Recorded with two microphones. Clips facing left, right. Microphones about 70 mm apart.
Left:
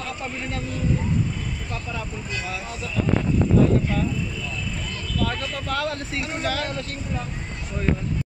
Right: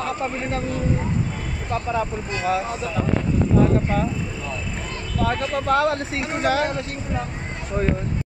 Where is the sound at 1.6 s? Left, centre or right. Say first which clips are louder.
Right 8 dB; right.